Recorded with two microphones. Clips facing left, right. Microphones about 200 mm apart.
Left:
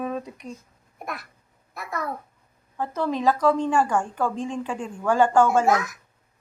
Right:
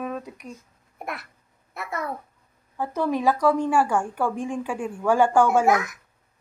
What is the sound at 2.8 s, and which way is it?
A woman's voice, 15° right (ahead or behind).